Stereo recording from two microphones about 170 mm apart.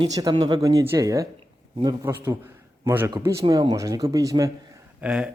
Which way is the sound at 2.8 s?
10° right (ahead or behind).